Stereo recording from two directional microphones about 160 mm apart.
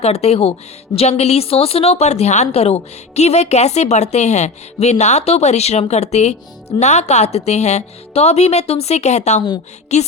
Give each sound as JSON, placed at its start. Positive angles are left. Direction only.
{"t": 0.0, "sound": "a woman's voice", "side_deg": 40}